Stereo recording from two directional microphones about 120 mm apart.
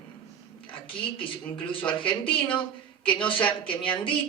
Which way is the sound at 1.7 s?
45° left (ahead or behind).